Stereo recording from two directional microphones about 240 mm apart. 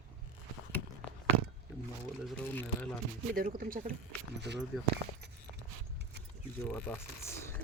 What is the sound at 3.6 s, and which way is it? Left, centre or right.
Speech, right.